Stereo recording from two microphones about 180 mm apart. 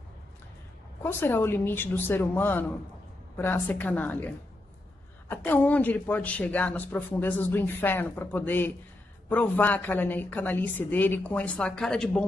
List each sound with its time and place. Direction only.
1.0 s speech: 10° left (ahead or behind)
5.3 s speech: 10° left (ahead or behind)